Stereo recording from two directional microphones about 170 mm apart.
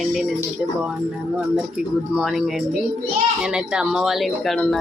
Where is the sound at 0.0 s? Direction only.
Centre (ahead or behind).